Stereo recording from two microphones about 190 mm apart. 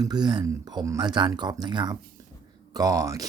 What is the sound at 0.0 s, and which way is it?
Speech, 20° right (ahead or behind).